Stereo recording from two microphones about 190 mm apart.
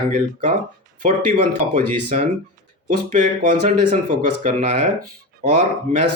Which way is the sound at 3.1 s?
45° right (ahead or behind).